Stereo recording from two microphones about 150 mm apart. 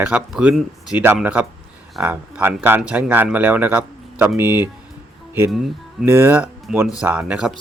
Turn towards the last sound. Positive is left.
turn(degrees=-5)  # may be behind; listen again after turning